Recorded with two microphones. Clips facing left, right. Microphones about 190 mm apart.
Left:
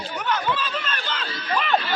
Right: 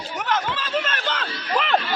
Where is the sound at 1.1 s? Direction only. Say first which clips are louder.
Right 1 dB; 75° right (ahead or behind).